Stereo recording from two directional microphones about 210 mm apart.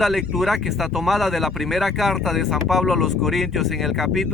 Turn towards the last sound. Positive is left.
turn(degrees=0)  # may be behind; listen again after turning